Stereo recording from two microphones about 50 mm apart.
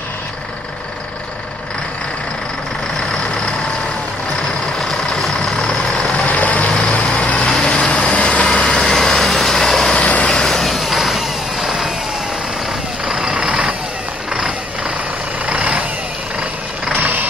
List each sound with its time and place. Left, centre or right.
4.7 s vehicle: centre
6.2 s vehicle: left
7.4 s vehicle: centre
8.9 s vehicle: centre
9.9 s vehicle: left
10.3 s vehicle: centre
13.0 s vehicle: centre
15.4 s vehicle: right
16.9 s vehicle: right